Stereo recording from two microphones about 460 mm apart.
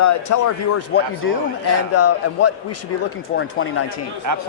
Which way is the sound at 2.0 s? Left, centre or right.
Left.